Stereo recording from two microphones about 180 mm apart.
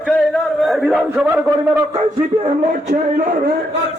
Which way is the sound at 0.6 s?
Centre (ahead or behind).